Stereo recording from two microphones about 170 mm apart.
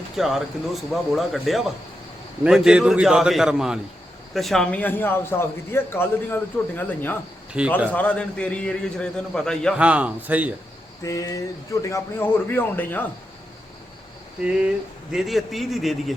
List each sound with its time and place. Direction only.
0.2 s a man's voice: centre (ahead or behind)
9.7 s speech: 5° right (ahead or behind)
11.0 s a man's voice: 20° left (ahead or behind)
15.1 s speech: centre (ahead or behind)